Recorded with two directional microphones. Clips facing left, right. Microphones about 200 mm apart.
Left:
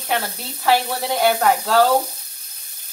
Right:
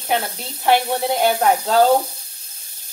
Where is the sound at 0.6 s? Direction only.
20° right (ahead or behind).